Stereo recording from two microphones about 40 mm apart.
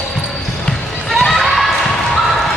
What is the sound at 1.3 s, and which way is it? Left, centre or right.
Basketball bounce, centre.